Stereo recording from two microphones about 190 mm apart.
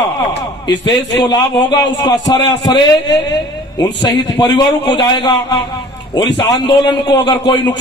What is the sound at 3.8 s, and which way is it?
A man's voice, 20° left (ahead or behind).